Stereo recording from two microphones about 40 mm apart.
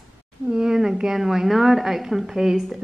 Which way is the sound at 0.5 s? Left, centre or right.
Centre.